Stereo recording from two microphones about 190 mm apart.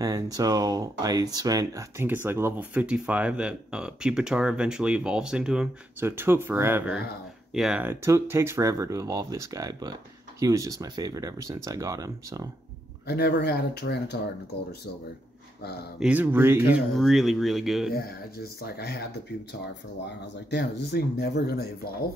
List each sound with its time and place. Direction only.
0.0 s speech: 20° right (ahead or behind)
13.0 s speech: 60° left (ahead or behind)
16.0 s speech: 10° right (ahead or behind)
16.9 s speech: centre (ahead or behind)
17.9 s speech: 55° left (ahead or behind)
20.4 s speech: 65° left (ahead or behind)